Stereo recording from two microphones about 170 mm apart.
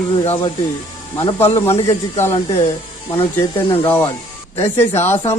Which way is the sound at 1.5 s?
15° left (ahead or behind).